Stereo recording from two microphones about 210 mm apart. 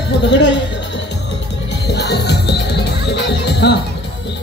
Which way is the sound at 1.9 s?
50° left (ahead or behind).